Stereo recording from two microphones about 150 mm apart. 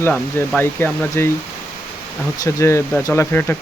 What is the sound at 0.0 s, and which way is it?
Speech, 10° left (ahead or behind).